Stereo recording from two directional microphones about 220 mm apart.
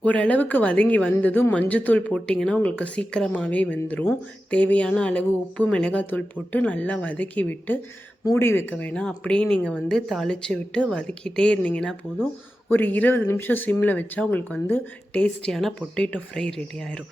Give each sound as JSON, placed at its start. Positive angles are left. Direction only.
{"t": 0.0, "sound": "a woman's voice", "side_deg": 5}